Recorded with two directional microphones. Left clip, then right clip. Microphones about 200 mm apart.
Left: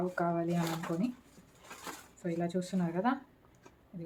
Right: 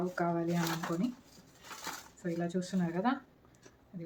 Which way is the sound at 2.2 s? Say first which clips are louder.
Left 1 dB; 15° left (ahead or behind).